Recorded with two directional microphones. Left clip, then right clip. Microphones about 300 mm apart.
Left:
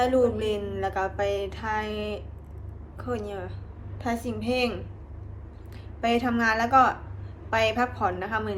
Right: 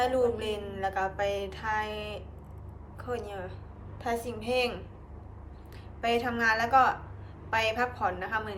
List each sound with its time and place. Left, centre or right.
0.0 s a woman's voice: centre
6.0 s a woman's voice: centre